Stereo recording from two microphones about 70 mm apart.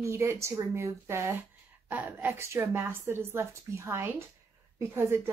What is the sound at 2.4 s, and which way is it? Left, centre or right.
Speech, right.